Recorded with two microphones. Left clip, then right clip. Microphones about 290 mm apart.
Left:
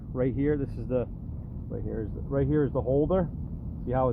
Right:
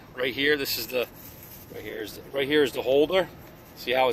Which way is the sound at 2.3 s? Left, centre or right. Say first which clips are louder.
Right 4 dB; right.